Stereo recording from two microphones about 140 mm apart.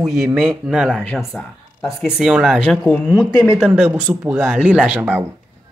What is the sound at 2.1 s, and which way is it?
Speech, centre (ahead or behind).